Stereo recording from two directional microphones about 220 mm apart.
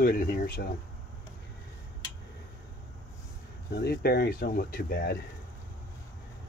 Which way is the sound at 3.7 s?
45° left (ahead or behind).